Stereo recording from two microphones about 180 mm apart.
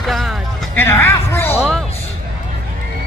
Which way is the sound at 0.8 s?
15° left (ahead or behind).